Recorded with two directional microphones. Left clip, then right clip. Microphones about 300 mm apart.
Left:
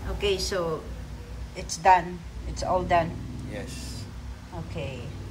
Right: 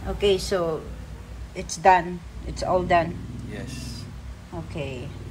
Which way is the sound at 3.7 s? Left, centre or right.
Right.